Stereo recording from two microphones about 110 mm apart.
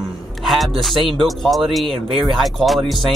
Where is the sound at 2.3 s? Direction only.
Centre (ahead or behind).